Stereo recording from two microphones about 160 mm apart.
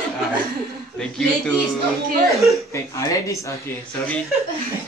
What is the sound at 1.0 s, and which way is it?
Speech, 5° left (ahead or behind).